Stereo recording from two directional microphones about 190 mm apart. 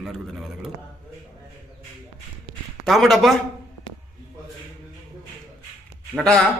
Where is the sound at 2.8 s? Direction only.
Centre (ahead or behind).